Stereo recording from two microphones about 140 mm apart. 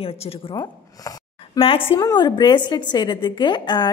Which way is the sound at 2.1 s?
30° left (ahead or behind).